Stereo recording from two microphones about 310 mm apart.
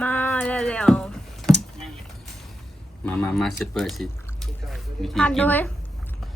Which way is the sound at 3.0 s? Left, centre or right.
Centre.